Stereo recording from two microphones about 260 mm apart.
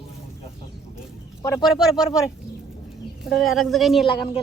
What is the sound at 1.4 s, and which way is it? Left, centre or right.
Speech, centre.